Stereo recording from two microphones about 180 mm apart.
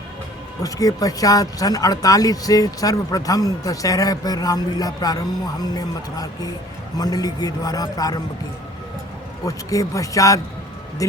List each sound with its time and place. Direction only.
0.6 s speech: 20° left (ahead or behind)
9.5 s speech: 20° left (ahead or behind)